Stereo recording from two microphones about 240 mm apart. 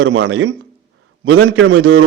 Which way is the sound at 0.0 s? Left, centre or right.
Right.